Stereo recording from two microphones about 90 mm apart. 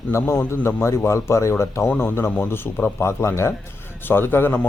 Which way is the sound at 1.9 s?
20° left (ahead or behind).